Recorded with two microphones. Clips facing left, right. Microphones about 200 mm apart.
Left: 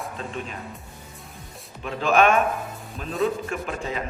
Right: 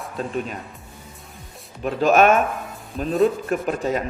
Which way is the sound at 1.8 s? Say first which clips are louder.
Right 4 dB; 40° right (ahead or behind).